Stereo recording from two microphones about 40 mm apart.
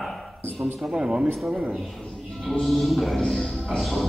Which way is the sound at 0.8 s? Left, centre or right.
Right.